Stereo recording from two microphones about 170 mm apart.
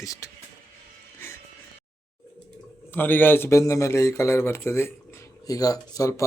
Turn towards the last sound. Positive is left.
turn(degrees=20)  # may be behind; listen again after turning